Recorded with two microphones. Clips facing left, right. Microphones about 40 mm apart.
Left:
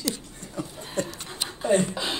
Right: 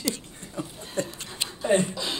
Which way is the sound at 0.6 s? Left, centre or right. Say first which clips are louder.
Left 1 dB; right.